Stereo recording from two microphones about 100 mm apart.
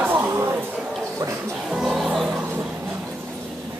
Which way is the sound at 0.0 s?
20° right (ahead or behind).